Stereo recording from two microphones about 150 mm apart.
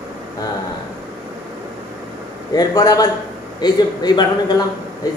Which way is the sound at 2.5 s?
25° left (ahead or behind).